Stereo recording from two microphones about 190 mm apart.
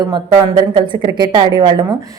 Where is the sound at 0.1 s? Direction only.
25° right (ahead or behind).